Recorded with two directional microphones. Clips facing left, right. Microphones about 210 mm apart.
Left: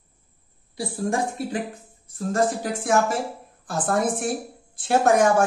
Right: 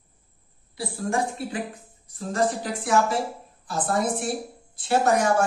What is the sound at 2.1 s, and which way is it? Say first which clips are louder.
A woman's voice: left 2 dB; 45° left (ahead or behind).